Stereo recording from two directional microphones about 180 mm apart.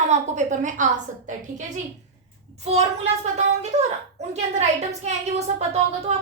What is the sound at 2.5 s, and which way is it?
A child's voice, 35° right (ahead or behind).